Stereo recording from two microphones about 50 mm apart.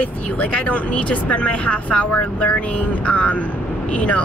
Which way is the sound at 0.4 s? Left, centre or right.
Left.